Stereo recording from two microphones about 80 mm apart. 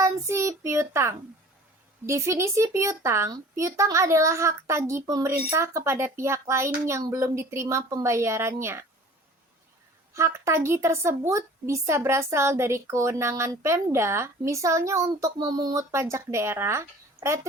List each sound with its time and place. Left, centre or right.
0.0 s child singing: right
2.0 s speech: right
10.2 s speech: right